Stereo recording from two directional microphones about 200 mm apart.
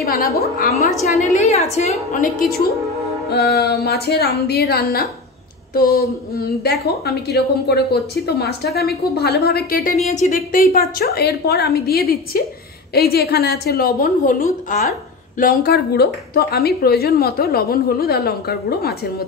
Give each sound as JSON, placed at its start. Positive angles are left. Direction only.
{"t": 0.0, "sound": "speech", "side_deg": 50}
{"t": 1.3, "sound": "a woman's voice", "side_deg": 35}
{"t": 3.3, "sound": "speech", "side_deg": 50}
{"t": 10.0, "sound": "speech", "side_deg": 35}